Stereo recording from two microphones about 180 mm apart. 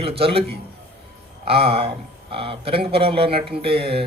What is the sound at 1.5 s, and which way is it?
Speech, 30° right (ahead or behind).